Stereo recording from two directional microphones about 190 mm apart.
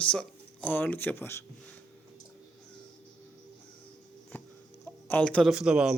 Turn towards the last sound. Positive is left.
turn(degrees=-5)  # may be behind; listen again after turning